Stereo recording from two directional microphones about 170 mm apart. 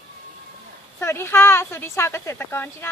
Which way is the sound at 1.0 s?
15° left (ahead or behind).